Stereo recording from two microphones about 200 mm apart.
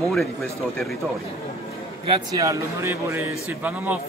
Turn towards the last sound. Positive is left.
turn(degrees=-10)  # may be behind; listen again after turning